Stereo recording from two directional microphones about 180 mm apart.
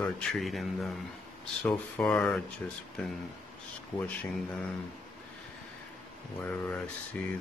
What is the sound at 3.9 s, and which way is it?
Speech, 25° left (ahead or behind).